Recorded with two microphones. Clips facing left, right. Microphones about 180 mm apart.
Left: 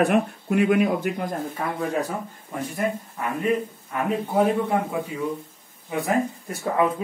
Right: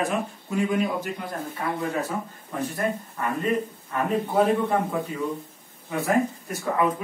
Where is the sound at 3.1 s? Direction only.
10° left (ahead or behind).